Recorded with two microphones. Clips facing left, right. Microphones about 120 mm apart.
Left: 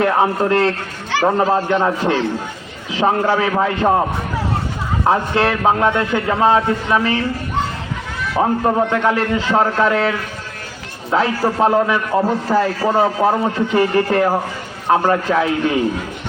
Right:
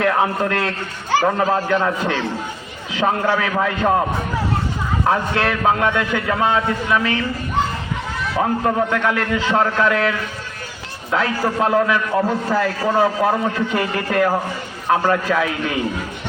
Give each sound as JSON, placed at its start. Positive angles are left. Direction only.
{"t": 0.0, "sound": "a man's voice", "side_deg": 25}
{"t": 5.0, "sound": "a man's voice", "side_deg": 25}
{"t": 8.4, "sound": "a man's voice", "side_deg": 25}
{"t": 12.1, "sound": "a man's voice", "side_deg": 10}
{"t": 12.8, "sound": "a man's voice", "side_deg": 25}